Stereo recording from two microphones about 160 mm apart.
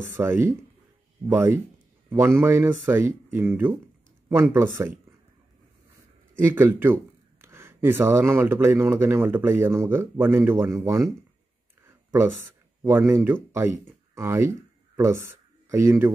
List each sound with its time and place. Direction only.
0.1 s speech: 15° right (ahead or behind)
6.5 s speech: 15° right (ahead or behind)
11.8 s a sound: 15° right (ahead or behind)
12.8 s speech: 15° right (ahead or behind)